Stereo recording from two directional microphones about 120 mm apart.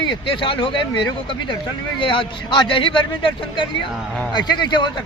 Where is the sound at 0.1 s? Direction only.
45° left (ahead or behind).